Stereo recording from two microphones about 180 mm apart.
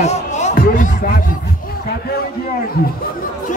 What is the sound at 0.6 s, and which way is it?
Music, 55° left (ahead or behind).